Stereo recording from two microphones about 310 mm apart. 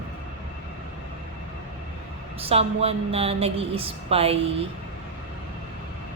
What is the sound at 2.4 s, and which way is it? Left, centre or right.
Speech, centre.